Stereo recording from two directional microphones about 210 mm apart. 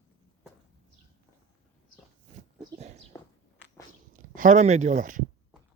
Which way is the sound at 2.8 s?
30° right (ahead or behind).